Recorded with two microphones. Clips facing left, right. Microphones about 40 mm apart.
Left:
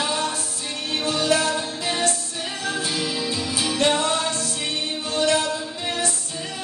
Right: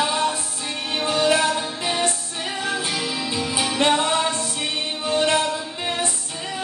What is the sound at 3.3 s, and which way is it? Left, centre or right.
Music, right.